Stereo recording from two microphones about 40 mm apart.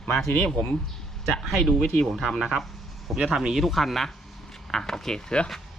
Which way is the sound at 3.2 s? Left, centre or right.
Centre.